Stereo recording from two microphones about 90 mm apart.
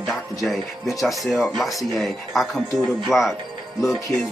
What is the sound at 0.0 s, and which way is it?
Music, centre (ahead or behind).